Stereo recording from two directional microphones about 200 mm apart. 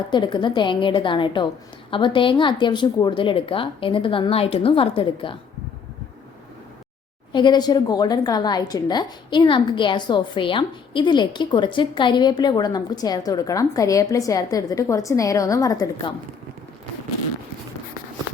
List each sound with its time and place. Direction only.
0.1 s a woman's voice: 20° left (ahead or behind)
7.3 s a woman's voice: 20° left (ahead or behind)